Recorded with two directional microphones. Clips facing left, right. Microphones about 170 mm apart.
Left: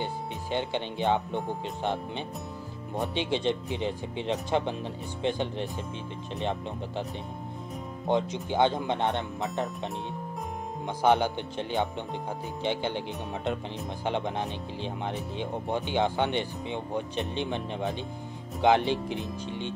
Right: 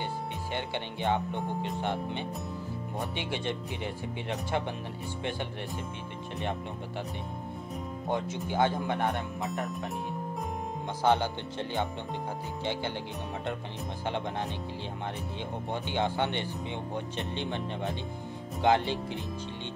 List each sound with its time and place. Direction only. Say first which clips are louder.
0.0 s speech: left 1 dB; 20° left (ahead or behind)
8.1 s speech: left 5 dB; 20° left (ahead or behind)
11.0 s speech: left 3 dB; 15° left (ahead or behind)
14.0 s speech: left 3 dB; 15° left (ahead or behind)